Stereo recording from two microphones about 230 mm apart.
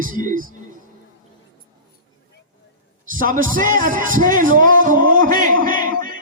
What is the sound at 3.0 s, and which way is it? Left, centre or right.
A man's voice, right.